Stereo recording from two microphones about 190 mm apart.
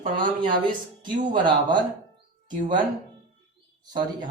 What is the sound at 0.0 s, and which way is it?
Speech, 25° right (ahead or behind).